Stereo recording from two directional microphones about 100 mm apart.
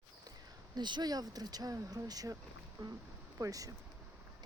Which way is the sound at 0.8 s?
45° right (ahead or behind).